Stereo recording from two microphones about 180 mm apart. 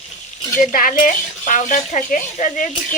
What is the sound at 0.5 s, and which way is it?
Speech, 50° left (ahead or behind).